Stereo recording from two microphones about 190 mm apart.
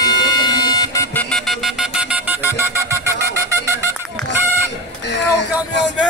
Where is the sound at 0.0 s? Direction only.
20° left (ahead or behind).